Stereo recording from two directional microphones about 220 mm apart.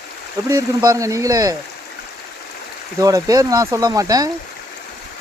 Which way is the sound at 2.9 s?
15° right (ahead or behind).